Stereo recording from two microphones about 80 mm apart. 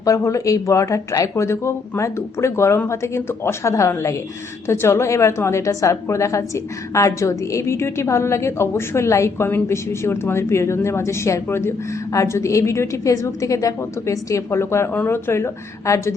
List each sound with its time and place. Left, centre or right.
0.0 s a woman's voice: left
15.9 s a woman's voice: left